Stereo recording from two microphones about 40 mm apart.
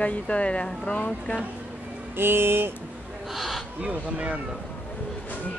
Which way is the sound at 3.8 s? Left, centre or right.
Right.